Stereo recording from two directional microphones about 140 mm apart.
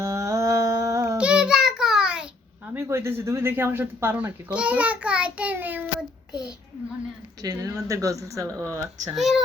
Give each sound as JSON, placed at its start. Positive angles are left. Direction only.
{"t": 0.0, "sound": "humming", "side_deg": -20}
{"t": 1.2, "sound": "child singing", "side_deg": -5}
{"t": 2.7, "sound": "child singing", "side_deg": -20}
{"t": 7.4, "sound": "speech", "side_deg": -25}
{"t": 9.1, "sound": "speech", "side_deg": 0}